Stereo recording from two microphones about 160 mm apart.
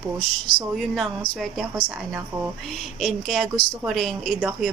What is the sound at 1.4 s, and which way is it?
A woman's voice, centre (ahead or behind).